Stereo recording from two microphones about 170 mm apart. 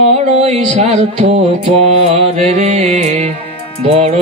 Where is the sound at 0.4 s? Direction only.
35° right (ahead or behind).